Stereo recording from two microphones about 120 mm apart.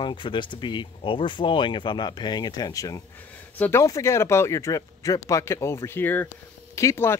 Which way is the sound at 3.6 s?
20° left (ahead or behind).